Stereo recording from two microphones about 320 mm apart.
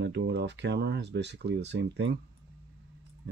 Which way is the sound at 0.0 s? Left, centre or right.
Right.